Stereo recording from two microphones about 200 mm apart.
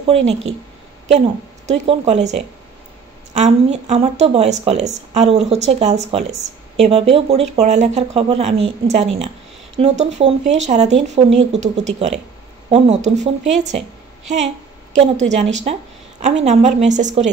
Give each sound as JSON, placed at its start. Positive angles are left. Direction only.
{"t": 0.0, "sound": "a woman's voice", "side_deg": -30}
{"t": 14.9, "sound": "speech", "side_deg": -35}